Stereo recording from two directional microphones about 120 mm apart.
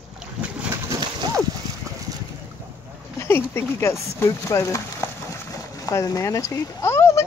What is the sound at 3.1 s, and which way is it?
A child's voice, 20° left (ahead or behind).